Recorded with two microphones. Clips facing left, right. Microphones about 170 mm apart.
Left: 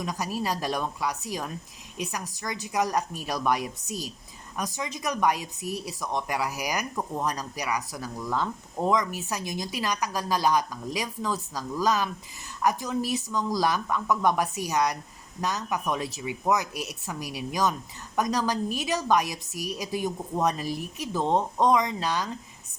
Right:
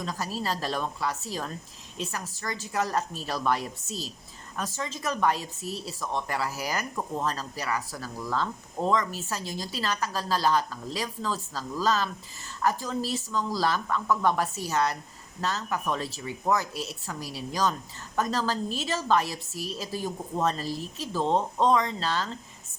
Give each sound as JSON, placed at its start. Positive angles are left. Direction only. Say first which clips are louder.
{"t": 0.0, "sound": "speech", "louder": "left 2 dB", "side_deg": 15}